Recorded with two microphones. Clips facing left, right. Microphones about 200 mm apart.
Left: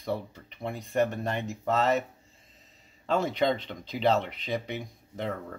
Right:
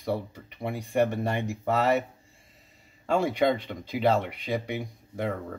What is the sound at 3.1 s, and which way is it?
Speech, 10° right (ahead or behind).